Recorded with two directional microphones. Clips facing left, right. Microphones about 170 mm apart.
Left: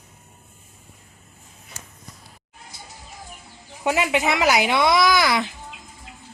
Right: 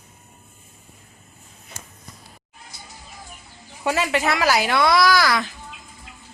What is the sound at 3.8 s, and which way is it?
Speech, 15° left (ahead or behind).